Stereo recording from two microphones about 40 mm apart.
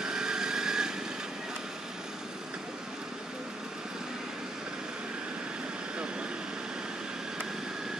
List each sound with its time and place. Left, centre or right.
0.0 s vehicle: centre